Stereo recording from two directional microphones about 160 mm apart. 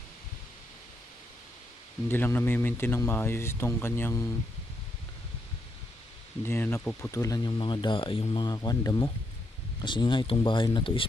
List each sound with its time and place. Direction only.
2.0 s speech: 15° left (ahead or behind)
6.4 s speech: 15° left (ahead or behind); by 11.0 s 30° left (ahead or behind)